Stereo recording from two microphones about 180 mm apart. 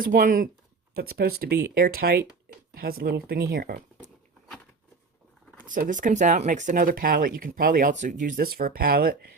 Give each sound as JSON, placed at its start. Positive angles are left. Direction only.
{"t": 0.0, "sound": "speech", "side_deg": -50}
{"t": 0.9, "sound": "speech", "side_deg": -60}
{"t": 5.6, "sound": "speech", "side_deg": -45}